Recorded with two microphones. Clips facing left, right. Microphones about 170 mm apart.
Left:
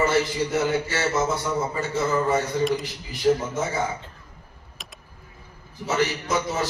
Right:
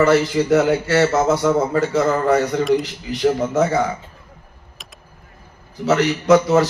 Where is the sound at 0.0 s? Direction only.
85° right.